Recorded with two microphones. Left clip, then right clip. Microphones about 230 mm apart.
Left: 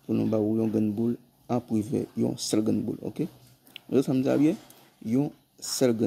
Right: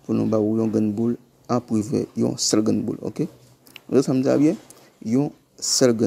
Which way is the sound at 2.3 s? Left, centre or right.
Centre.